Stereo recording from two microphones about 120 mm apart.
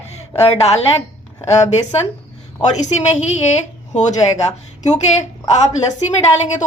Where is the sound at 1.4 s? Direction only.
25° left (ahead or behind).